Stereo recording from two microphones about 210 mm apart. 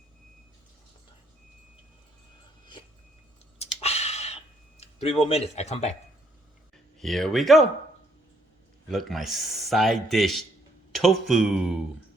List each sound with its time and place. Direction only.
3.6 s a sound: 30° left (ahead or behind)
4.8 s speech: 30° left (ahead or behind)
7.0 s a man's voice: centre (ahead or behind)
8.9 s a man's voice: centre (ahead or behind)